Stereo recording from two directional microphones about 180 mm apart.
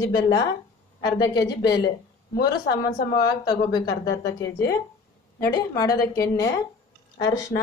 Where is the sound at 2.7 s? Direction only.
60° left (ahead or behind).